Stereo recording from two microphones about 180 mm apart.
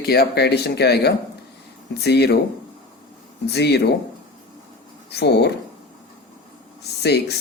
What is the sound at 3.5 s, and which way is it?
Speech, 65° left (ahead or behind).